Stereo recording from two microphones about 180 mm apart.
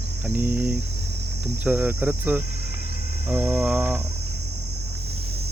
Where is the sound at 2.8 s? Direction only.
55° left (ahead or behind).